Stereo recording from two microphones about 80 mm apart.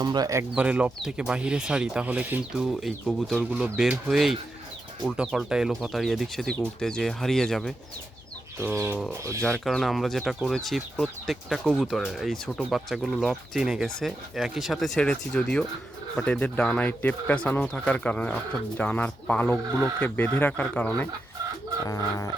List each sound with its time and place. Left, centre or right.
0.0 s speech: right
0.5 s speech: centre
8.5 s speech: right
9.6 s speech: centre
21.8 s bird: left